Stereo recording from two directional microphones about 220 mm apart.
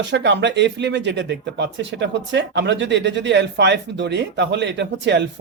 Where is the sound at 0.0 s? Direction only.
55° right (ahead or behind).